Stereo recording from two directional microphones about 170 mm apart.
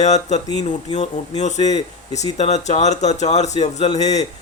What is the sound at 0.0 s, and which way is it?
Speech, 45° left (ahead or behind).